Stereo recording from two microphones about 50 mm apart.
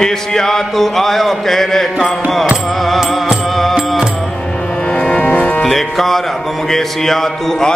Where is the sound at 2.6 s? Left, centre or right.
Centre.